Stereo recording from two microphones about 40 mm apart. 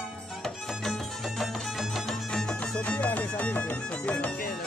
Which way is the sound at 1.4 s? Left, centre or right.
Centre.